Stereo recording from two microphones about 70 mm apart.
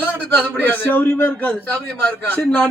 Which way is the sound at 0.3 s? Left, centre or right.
Left.